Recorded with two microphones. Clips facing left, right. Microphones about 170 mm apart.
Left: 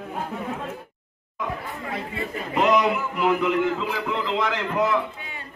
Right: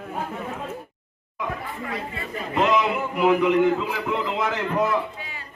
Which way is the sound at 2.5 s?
Centre (ahead or behind).